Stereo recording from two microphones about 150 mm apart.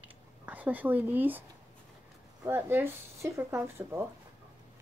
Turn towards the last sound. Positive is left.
turn(degrees=-15)  # may be behind; listen again after turning